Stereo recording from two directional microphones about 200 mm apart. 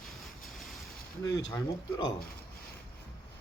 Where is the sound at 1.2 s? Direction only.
15° left (ahead or behind).